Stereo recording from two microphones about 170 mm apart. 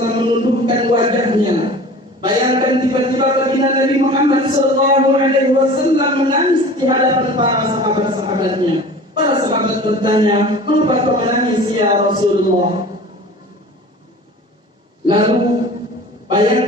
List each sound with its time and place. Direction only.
0.0 s a man's voice: 30° right (ahead or behind)
15.0 s a woman's voice: 30° right (ahead or behind)